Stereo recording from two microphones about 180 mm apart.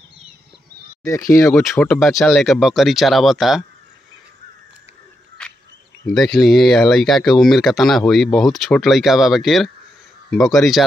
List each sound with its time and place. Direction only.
1.3 s speech: 15° left (ahead or behind)
1.6 s speech: 5° left (ahead or behind)
6.1 s speech: centre (ahead or behind)